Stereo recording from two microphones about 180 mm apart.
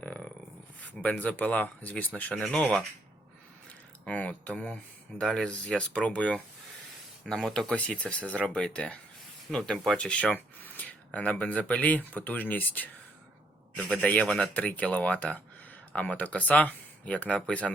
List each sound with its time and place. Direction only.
0.0 s a sound: 5° left (ahead or behind)
0.8 s speech: 10° left (ahead or behind)
4.0 s speech: 5° left (ahead or behind)